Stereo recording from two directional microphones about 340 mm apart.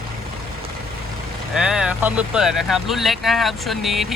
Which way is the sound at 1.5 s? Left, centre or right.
Centre.